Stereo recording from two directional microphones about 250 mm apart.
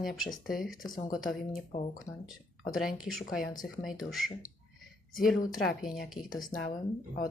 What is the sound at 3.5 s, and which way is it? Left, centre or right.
Speech, centre.